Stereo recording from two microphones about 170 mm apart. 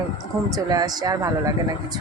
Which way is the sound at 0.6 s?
20° right (ahead or behind).